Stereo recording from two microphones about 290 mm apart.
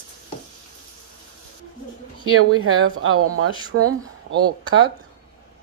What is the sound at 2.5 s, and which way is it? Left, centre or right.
Speech, right.